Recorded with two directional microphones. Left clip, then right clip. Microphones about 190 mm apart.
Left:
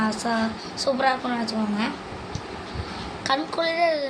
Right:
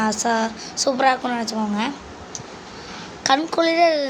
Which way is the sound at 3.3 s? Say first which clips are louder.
Right 6 dB; 50° right (ahead or behind).